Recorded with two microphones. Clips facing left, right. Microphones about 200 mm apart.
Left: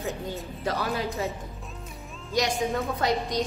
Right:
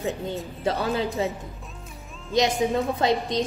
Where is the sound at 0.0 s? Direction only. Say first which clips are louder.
Right 4 dB; centre (ahead or behind).